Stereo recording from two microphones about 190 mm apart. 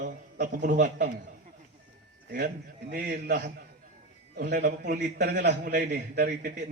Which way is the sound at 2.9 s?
50° right (ahead or behind).